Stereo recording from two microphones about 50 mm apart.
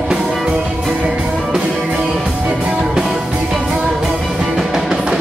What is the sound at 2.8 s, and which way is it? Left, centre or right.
Music, centre.